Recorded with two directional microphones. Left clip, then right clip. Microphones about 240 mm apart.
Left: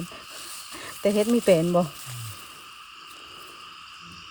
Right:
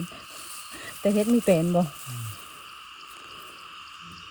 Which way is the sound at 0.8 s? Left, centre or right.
Left.